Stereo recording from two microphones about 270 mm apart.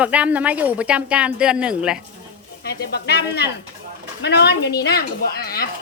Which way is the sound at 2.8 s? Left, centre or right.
Left.